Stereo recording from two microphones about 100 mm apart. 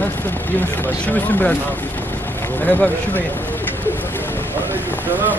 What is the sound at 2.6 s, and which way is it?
Speech, 20° left (ahead or behind).